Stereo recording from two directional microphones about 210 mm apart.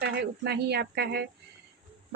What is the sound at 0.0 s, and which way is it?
A woman's voice, 50° right (ahead or behind).